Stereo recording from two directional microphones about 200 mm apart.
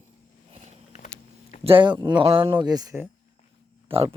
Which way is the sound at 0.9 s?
40° left (ahead or behind).